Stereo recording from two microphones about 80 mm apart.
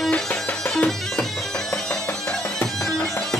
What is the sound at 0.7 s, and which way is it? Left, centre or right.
Bagpipes, centre.